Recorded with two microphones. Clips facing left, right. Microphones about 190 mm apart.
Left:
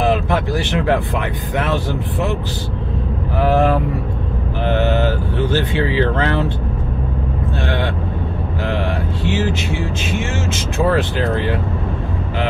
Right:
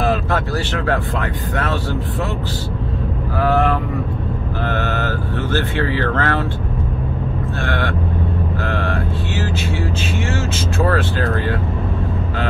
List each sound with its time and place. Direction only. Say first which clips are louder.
0.0 s speech: left 2 dB; 15° left (ahead or behind)
4.6 s speech: left 6 dB; 15° left (ahead or behind)
7.6 s speech: left 1 dB; 20° left (ahead or behind)
8.6 s vehicle: left 3 dB; 20° left (ahead or behind)
10.9 s speech: left 4 dB; 20° left (ahead or behind)